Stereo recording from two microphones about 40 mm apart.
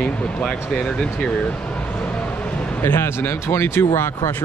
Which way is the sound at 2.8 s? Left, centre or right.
Left.